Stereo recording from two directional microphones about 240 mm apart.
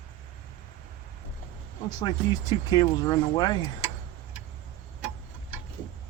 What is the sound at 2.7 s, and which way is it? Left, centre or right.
Speech, centre.